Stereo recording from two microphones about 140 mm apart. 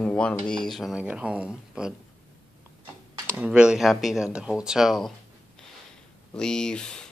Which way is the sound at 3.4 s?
5° right (ahead or behind).